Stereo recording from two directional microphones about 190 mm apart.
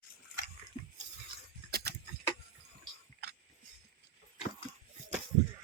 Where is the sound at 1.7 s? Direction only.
55° right (ahead or behind).